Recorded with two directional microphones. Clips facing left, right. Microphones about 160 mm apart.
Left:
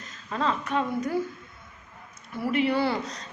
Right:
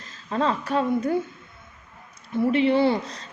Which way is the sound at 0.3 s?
35° right (ahead or behind).